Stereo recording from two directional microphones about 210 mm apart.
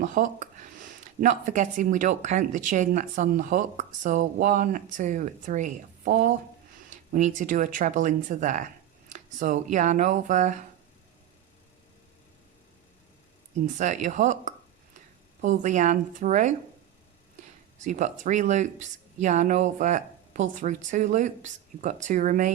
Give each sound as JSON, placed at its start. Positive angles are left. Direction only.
{"t": 0.0, "sound": "speech", "side_deg": -40}
{"t": 13.7, "sound": "speech", "side_deg": -35}
{"t": 17.7, "sound": "speech", "side_deg": -35}